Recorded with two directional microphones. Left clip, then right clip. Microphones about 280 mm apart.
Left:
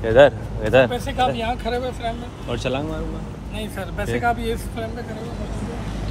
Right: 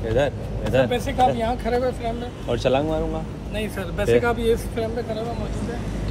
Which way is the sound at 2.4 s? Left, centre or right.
Centre.